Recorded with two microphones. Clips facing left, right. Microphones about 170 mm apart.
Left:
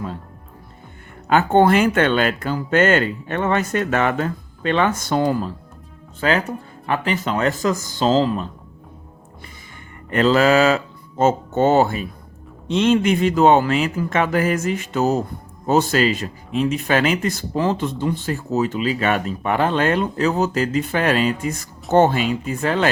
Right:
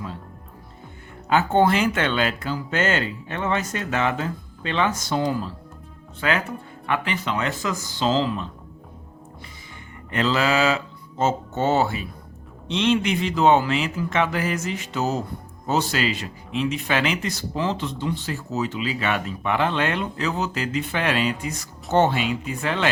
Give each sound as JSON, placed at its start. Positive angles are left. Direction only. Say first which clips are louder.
{"t": 1.3, "sound": "speech", "louder": "left 4 dB", "side_deg": 55}
{"t": 6.1, "sound": "speech", "louder": "left 4 dB", "side_deg": 35}
{"t": 10.1, "sound": "speech", "louder": "left 7 dB", "side_deg": 50}